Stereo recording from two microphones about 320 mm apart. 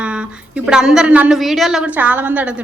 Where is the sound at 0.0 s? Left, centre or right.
Centre.